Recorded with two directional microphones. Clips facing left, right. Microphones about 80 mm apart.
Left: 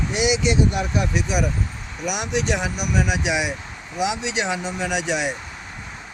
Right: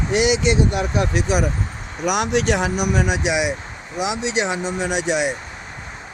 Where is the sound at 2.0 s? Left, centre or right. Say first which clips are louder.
Right 5 dB; right.